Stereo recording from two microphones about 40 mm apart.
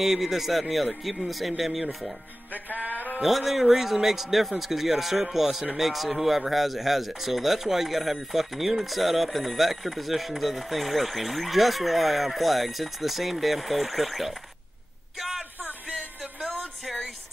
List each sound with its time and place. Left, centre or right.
0.0 s speech: centre
2.9 s mantra: left
3.2 s speech: centre
15.1 s a sound: centre